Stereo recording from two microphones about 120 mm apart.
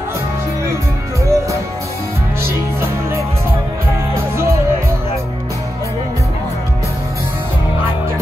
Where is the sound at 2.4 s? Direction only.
20° right (ahead or behind).